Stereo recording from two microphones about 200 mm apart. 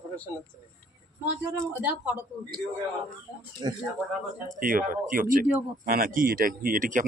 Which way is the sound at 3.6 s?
20° right (ahead or behind).